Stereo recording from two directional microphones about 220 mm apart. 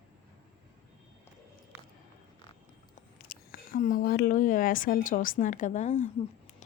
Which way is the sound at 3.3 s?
40° left (ahead or behind).